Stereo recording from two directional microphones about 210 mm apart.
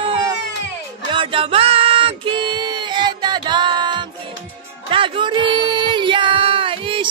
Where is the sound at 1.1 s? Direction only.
25° right (ahead or behind).